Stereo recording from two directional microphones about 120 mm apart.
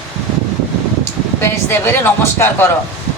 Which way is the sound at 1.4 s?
20° left (ahead or behind).